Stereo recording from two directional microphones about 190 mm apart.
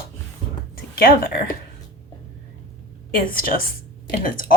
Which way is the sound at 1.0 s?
50° left (ahead or behind).